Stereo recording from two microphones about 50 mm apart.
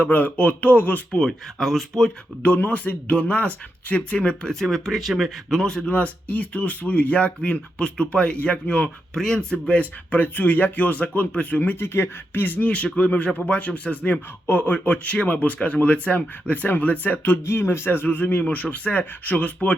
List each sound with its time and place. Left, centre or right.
0.0 s speech: left
1.1 s speech: centre
2.6 s speech: left
4.6 s speech: centre
5.5 s speech: centre
9.1 s speech: centre
9.6 s speech: left
11.8 s speech: left
12.4 s speech: left
12.6 s speech: left
17.4 s speech: left